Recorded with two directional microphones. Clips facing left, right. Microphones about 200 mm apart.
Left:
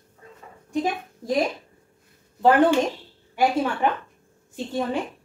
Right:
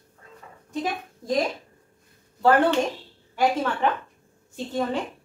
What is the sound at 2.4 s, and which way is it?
Child singing, 15° left (ahead or behind).